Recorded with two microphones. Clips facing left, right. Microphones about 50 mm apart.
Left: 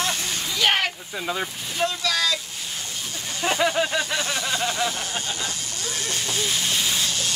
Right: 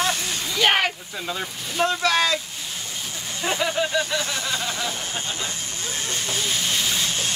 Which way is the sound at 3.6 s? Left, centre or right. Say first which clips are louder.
Left 1 dB; left.